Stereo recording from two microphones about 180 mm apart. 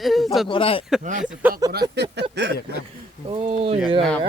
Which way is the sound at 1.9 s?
70° right (ahead or behind).